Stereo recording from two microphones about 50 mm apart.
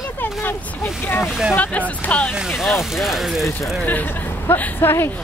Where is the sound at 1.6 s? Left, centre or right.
Left.